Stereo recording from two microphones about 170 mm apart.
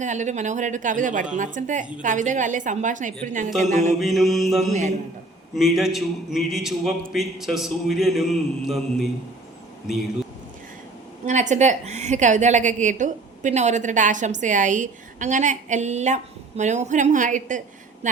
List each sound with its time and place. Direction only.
0.0 s a woman's voice: 45° right (ahead or behind)
4.0 s a man's voice: centre (ahead or behind)
4.7 s a woman's voice: 45° right (ahead or behind)
5.5 s a man's voice: centre (ahead or behind)
11.3 s a woman's voice: 45° right (ahead or behind)